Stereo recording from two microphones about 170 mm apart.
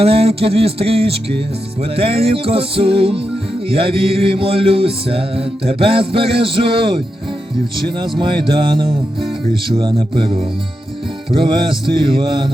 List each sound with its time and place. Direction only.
0.0 s mantra: 35° right (ahead or behind)
7.9 s music: 25° right (ahead or behind)